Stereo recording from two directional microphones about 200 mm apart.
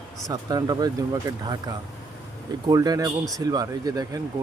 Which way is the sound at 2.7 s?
20° right (ahead or behind).